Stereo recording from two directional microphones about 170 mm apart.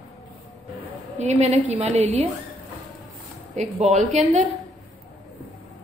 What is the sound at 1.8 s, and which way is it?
Speech, 40° right (ahead or behind).